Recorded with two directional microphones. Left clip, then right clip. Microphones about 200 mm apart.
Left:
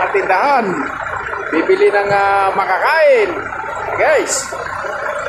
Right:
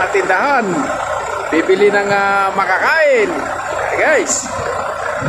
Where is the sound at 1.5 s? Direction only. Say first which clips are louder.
Even; 15° right (ahead or behind).